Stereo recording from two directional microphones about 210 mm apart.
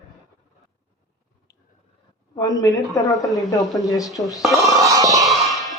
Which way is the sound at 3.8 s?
15° left (ahead or behind).